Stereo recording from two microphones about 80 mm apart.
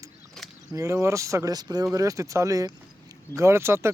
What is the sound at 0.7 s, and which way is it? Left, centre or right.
Speech, right.